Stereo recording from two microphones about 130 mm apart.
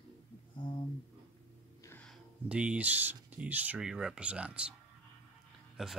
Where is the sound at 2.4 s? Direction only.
10° right (ahead or behind).